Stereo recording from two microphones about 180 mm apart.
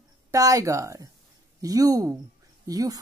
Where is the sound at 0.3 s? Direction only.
20° right (ahead or behind).